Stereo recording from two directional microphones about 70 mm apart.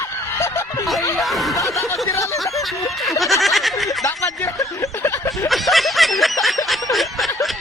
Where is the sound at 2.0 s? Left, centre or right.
Left.